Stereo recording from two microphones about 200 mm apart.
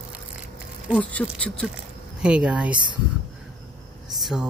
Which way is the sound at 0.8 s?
Centre (ahead or behind).